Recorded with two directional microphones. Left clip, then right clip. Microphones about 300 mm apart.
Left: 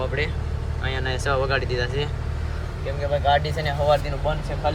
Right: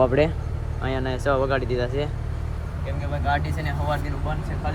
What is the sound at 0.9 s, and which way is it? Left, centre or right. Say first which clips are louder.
Speech: right 1 dB; centre.